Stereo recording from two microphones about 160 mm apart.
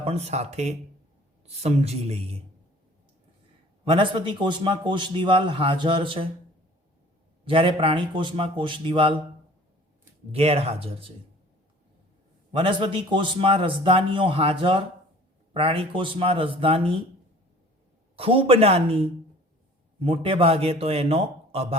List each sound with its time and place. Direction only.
0.0 s a man's voice: 40° right (ahead or behind)
3.8 s a man's voice: 30° right (ahead or behind)
7.4 s a man's voice: 35° right (ahead or behind)
10.3 s a man's voice: 40° right (ahead or behind)
12.5 s a man's voice: 30° right (ahead or behind)
18.2 s a man's voice: 35° right (ahead or behind)